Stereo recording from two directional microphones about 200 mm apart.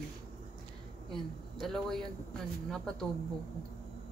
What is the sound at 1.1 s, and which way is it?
Speech, centre (ahead or behind).